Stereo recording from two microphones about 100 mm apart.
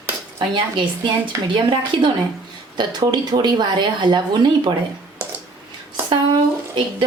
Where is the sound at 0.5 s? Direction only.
55° right (ahead or behind).